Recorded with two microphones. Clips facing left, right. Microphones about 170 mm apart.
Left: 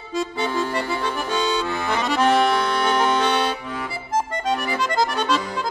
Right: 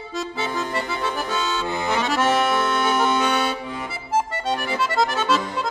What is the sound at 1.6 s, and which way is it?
Accordion, 20° right (ahead or behind).